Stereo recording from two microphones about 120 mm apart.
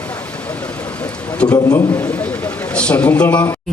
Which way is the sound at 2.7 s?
10° left (ahead or behind).